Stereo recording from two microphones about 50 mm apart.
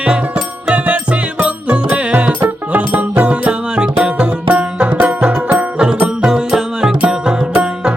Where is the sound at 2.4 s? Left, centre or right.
Right.